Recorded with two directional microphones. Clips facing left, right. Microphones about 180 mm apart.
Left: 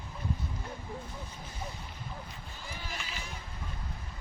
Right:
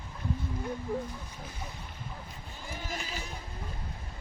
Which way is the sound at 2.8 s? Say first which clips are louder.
Right 5 dB; 40° right (ahead or behind).